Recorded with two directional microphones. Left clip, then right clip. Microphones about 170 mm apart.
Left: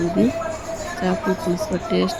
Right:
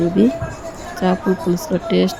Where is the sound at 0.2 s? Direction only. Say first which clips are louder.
Right 3 dB; 20° right (ahead or behind).